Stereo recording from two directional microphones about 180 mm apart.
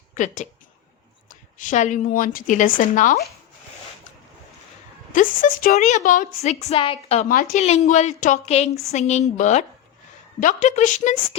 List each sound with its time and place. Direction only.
0.1 s a woman's voice: 45° left (ahead or behind)
5.1 s a woman's voice: 45° left (ahead or behind)
7.3 s a woman's voice: 45° left (ahead or behind)